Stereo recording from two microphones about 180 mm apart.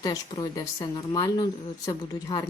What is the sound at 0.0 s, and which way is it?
Speech, 25° left (ahead or behind).